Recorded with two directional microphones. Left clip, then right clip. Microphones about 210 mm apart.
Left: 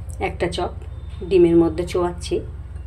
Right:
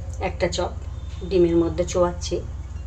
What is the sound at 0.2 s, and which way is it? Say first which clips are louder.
Speech: left 1 dB; 35° left (ahead or behind).